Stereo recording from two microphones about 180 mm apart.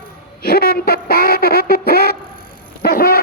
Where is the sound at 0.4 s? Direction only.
60° left (ahead or behind).